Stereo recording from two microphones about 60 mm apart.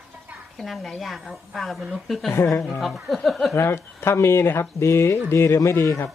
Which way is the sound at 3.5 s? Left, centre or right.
Left.